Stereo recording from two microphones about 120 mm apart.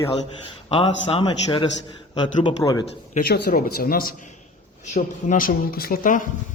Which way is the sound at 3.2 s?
85° left.